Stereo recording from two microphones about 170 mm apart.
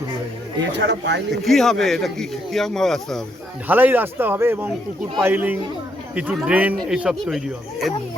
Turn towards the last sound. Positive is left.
turn(degrees=0)  # may be behind; listen again after turning